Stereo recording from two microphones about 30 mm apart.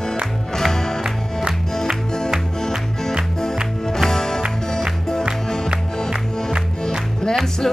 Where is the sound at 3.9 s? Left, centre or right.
Centre.